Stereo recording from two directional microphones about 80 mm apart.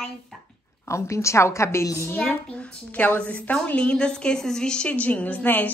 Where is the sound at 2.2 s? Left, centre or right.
Centre.